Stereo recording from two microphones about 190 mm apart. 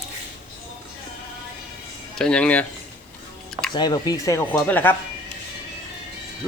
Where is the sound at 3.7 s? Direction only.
20° left (ahead or behind).